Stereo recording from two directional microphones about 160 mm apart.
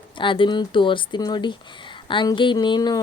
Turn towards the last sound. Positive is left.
turn(degrees=25)  # may be behind; listen again after turning